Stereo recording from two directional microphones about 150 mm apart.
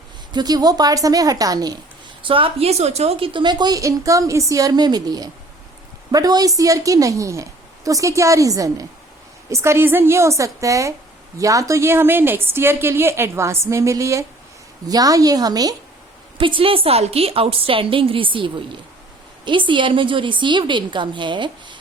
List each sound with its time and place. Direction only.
0.3 s a woman's voice: 25° right (ahead or behind)
2.2 s a woman's voice: 35° right (ahead or behind)